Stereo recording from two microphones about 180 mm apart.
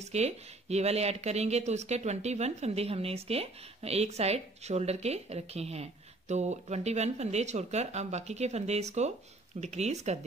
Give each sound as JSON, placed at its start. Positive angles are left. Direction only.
{"t": 0.0, "sound": "speech", "side_deg": -35}